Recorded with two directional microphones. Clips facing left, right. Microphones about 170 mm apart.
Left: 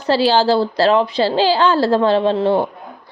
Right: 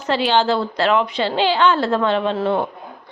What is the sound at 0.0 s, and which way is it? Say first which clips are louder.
A woman's voice: left 3 dB; 35° left (ahead or behind).